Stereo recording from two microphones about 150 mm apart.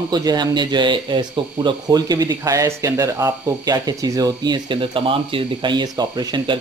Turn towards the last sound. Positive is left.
turn(degrees=-30)  # may be behind; listen again after turning